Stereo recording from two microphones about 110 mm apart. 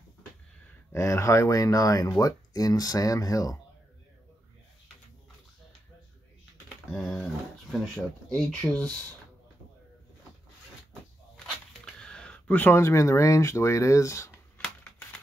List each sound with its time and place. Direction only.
0.9 s speech: 25° left (ahead or behind)
6.9 s speech: centre (ahead or behind)
8.3 s speech: 5° left (ahead or behind)
10.9 s a sound: 5° left (ahead or behind); by 14.3 s 30° left (ahead or behind)